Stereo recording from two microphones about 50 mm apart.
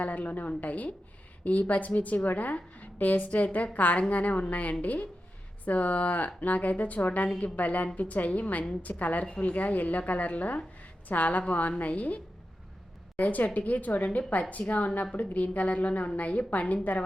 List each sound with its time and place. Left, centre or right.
0.0 s a woman's voice: left